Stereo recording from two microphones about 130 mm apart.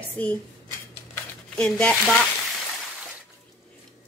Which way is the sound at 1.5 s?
10° left (ahead or behind).